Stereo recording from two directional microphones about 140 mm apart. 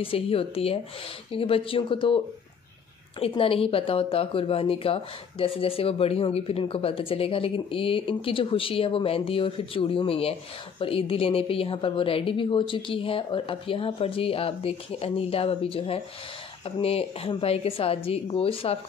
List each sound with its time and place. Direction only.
0.0 s speech: 40° left (ahead or behind)